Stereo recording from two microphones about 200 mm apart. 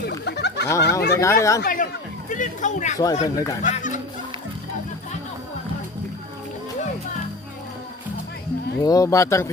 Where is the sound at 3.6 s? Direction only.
40° left (ahead or behind).